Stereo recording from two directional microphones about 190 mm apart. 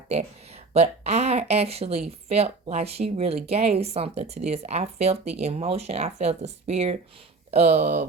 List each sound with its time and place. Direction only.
0.1 s speech: 35° right (ahead or behind)